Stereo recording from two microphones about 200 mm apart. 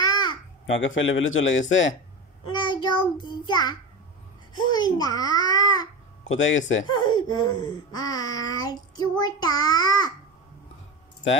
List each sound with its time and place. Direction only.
0.0 s babbling: 20° left (ahead or behind)
0.7 s a man's voice: 70° left (ahead or behind)
2.4 s child singing: 20° left (ahead or behind)
3.4 s speech: 20° left (ahead or behind)
6.2 s speech: 75° left (ahead or behind)
6.9 s speech: 20° left (ahead or behind)